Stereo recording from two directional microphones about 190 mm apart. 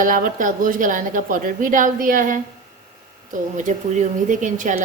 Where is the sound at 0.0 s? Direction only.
45° right (ahead or behind).